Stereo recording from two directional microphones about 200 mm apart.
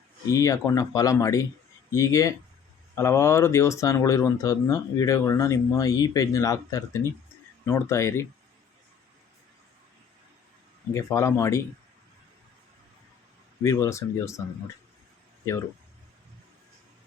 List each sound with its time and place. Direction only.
0.3 s speech: 15° left (ahead or behind)
10.9 s speech: 15° left (ahead or behind)
13.6 s speech: 15° left (ahead or behind)